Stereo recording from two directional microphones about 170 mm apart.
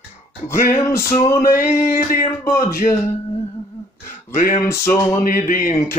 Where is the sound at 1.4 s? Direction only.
55° left (ahead or behind).